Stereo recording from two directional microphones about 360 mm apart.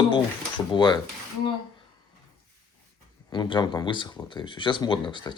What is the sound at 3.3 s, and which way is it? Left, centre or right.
Speech, centre.